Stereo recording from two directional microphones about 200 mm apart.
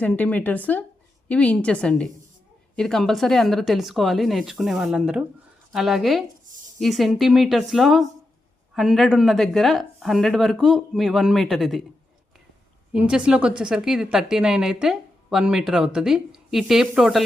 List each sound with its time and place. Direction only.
0.0 s a woman's voice: 5° left (ahead or behind)
12.9 s a woman's voice: 5° right (ahead or behind)